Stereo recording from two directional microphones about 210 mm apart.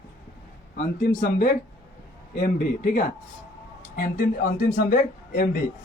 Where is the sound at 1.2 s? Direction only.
40° left (ahead or behind).